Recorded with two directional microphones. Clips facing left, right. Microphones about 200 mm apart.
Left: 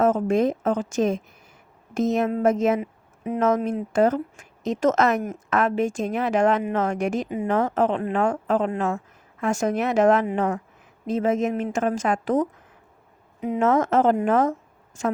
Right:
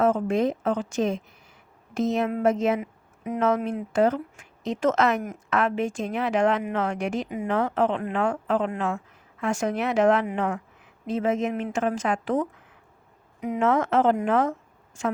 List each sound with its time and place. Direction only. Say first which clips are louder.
0.0 s a woman's voice: left 2 dB; 45° left (ahead or behind)
2.8 s speech: left 3 dB; 35° left (ahead or behind)
13.6 s speech: left 2 dB; 45° left (ahead or behind)